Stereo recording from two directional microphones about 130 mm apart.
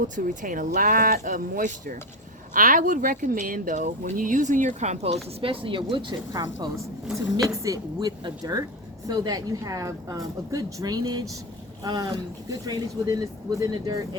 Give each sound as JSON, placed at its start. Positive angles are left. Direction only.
{"t": 0.0, "sound": "speech", "side_deg": -90}